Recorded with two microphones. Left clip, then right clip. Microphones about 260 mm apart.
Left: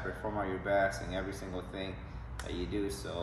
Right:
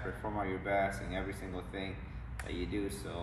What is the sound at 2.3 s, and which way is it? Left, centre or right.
Speech, centre.